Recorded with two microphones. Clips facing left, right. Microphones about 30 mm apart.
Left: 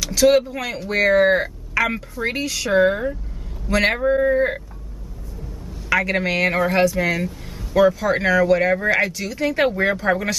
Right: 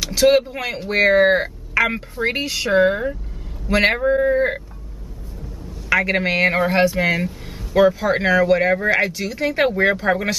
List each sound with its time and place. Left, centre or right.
0.0 s speech: centre
2.7 s speech: centre
5.9 s speech: centre